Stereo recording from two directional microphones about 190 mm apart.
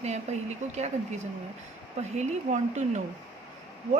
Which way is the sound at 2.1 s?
40° right (ahead or behind).